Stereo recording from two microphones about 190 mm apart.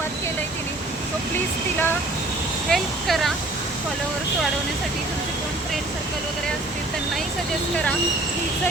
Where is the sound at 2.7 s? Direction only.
Centre (ahead or behind).